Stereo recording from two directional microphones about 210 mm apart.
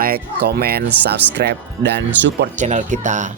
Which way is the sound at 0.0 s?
45° right (ahead or behind).